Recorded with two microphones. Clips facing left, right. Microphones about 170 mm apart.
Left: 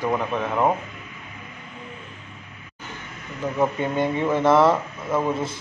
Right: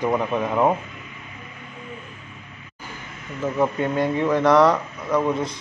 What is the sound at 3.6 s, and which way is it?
Speech, centre (ahead or behind).